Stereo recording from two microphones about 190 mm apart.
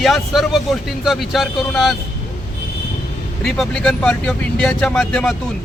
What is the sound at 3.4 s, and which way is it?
A man's voice, 5° left (ahead or behind).